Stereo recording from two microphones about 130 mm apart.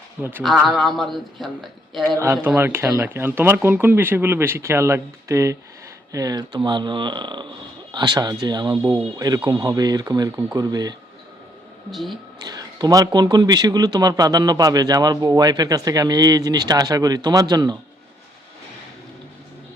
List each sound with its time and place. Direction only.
0.2 s speech: 15° right (ahead or behind)
0.4 s speech: centre (ahead or behind)
2.0 s a man's voice: 20° right (ahead or behind)
11.9 s speech: centre (ahead or behind)
12.4 s a man's voice: 30° right (ahead or behind)